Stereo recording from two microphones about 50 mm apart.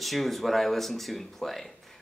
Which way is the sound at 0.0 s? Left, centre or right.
Centre.